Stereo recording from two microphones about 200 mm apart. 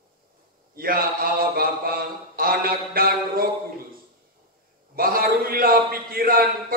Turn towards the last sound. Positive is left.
turn(degrees=-45)  # may be behind; listen again after turning